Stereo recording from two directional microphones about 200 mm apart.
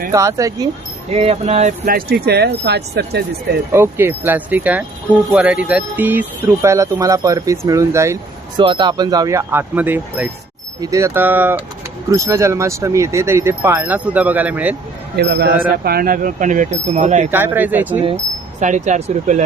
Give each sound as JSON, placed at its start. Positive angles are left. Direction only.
{"t": 0.1, "sound": "speech", "side_deg": -15}
{"t": 1.1, "sound": "speech", "side_deg": -30}
{"t": 3.7, "sound": "speech", "side_deg": -10}
{"t": 15.1, "sound": "speech", "side_deg": -55}
{"t": 17.3, "sound": "speech", "side_deg": -10}
{"t": 18.6, "sound": "speech", "side_deg": -35}